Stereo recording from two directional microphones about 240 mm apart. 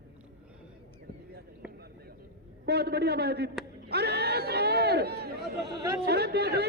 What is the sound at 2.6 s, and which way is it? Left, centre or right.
A man's voice, right.